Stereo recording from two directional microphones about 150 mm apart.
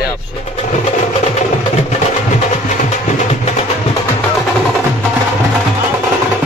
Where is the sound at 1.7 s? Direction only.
50° left (ahead or behind).